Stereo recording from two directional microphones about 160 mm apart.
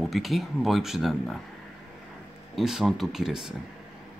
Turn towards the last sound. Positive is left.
turn(degrees=-5)  # may be behind; listen again after turning